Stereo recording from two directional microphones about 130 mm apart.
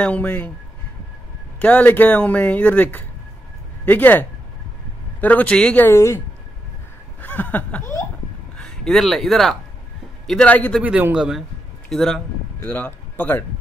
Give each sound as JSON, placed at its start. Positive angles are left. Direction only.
{"t": 0.0, "sound": "speech", "side_deg": 10}
{"t": 1.6, "sound": "speech", "side_deg": 10}
{"t": 5.9, "sound": "speech", "side_deg": 20}
{"t": 7.2, "sound": "chuckle", "side_deg": 15}
{"t": 8.5, "sound": "speech", "side_deg": 5}
{"t": 10.8, "sound": "a man's voice", "side_deg": -10}
{"t": 12.6, "sound": "speech", "side_deg": 15}